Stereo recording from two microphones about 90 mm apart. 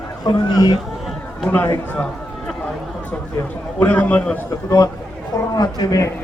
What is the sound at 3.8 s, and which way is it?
Speech, 20° left (ahead or behind).